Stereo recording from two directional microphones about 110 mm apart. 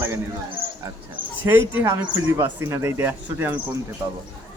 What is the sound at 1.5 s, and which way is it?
Speech, 20° right (ahead or behind).